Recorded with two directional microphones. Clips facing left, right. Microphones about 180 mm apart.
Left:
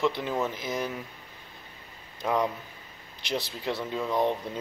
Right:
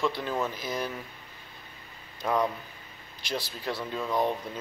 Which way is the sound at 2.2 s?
20° left (ahead or behind).